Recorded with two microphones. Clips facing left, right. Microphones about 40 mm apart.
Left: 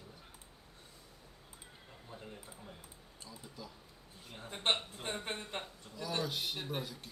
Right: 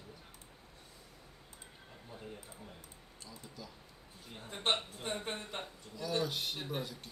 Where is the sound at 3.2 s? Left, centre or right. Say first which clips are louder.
Even; centre.